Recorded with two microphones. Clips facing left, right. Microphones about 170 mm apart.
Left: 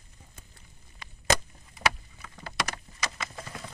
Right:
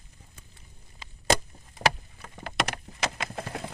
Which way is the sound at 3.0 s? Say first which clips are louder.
Right 6 dB; 60° right (ahead or behind).